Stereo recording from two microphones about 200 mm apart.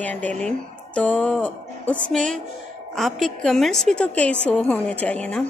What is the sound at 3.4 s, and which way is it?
A woman's voice, centre (ahead or behind).